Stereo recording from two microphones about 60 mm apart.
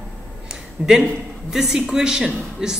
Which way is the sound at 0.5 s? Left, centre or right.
Centre.